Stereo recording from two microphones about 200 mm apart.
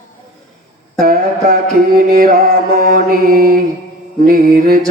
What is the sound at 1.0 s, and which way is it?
Music, 50° right (ahead or behind).